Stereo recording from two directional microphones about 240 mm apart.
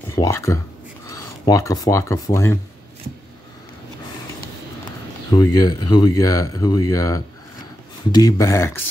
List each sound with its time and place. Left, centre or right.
0.1 s a sound: centre
1.1 s speech: centre
5.3 s speech: centre